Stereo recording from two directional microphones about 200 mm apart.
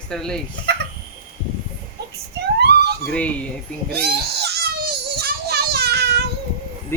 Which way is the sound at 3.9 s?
55° right (ahead or behind).